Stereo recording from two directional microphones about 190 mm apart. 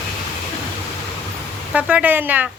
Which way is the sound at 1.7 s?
5° right (ahead or behind).